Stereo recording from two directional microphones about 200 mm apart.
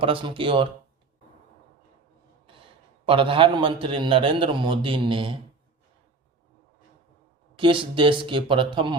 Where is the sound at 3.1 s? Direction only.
25° right (ahead or behind).